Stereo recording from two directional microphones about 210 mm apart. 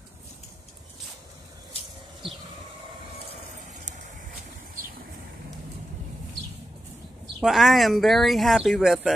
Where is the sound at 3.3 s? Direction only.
35° right (ahead or behind).